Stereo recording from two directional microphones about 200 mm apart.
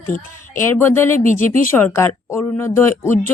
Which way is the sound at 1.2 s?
40° left (ahead or behind).